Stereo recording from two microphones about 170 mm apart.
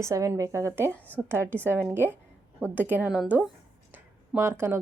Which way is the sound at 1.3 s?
15° right (ahead or behind).